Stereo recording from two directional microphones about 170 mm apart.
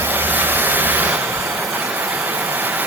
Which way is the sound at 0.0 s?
10° right (ahead or behind).